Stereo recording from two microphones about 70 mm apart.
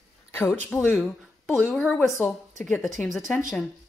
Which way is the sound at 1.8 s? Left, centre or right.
Left.